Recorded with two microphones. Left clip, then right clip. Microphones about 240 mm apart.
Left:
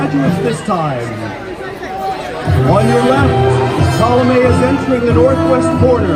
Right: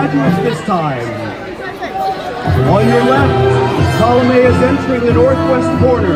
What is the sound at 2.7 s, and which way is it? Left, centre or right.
Speech, left.